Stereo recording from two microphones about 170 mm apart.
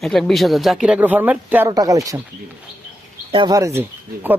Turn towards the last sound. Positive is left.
turn(degrees=-15)  # may be behind; listen again after turning